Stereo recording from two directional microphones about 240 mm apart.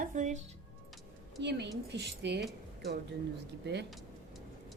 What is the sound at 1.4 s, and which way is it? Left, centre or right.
Speech, right.